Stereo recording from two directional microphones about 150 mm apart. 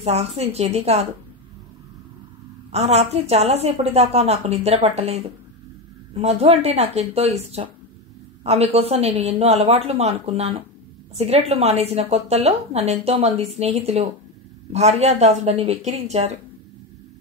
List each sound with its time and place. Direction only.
0.0 s a woman's voice: 45° right (ahead or behind)
2.7 s a woman's voice: 45° right (ahead or behind)